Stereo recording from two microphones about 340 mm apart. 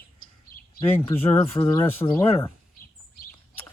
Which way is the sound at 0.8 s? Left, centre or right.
Centre.